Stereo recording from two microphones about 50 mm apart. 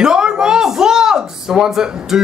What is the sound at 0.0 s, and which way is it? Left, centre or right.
Speech, centre.